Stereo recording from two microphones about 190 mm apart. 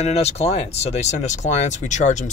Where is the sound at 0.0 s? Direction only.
35° left (ahead or behind).